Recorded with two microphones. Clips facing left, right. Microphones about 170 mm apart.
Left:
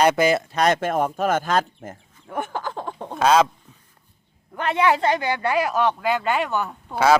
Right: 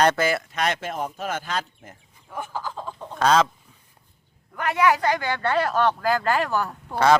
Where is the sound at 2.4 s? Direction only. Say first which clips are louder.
Left 4 dB; 65° left (ahead or behind).